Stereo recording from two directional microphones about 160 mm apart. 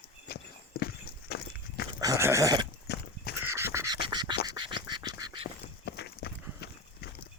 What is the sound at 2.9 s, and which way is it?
Horse, 90° left.